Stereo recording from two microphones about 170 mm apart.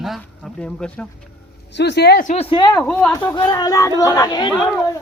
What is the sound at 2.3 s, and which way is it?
Speech, 30° left (ahead or behind).